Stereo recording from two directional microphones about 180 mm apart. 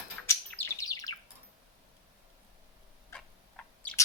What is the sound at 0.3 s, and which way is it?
Bird, 15° left (ahead or behind).